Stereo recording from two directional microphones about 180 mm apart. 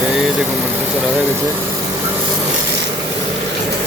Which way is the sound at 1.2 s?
15° right (ahead or behind).